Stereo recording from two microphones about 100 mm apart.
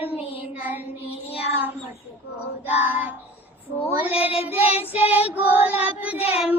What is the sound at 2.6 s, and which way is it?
Child singing, 20° right (ahead or behind).